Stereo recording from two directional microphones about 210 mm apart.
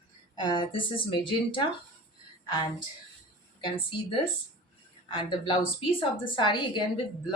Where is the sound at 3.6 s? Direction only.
25° left (ahead or behind).